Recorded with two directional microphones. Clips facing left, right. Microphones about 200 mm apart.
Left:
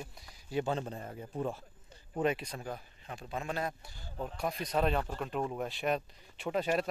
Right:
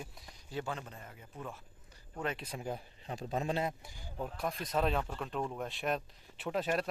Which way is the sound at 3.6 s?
15° right (ahead or behind).